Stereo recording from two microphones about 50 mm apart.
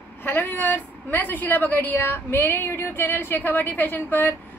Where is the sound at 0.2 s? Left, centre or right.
Left.